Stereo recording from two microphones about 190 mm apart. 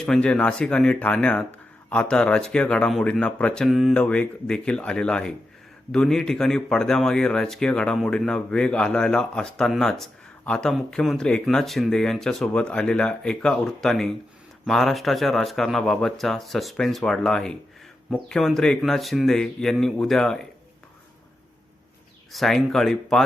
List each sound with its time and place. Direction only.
0.0 s speech: 5° left (ahead or behind)
22.3 s speech: centre (ahead or behind)